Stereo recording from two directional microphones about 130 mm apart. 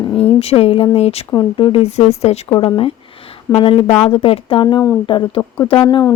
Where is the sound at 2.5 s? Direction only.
40° left (ahead or behind).